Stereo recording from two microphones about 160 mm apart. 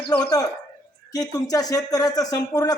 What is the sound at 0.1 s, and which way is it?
A man's voice, 25° left (ahead or behind).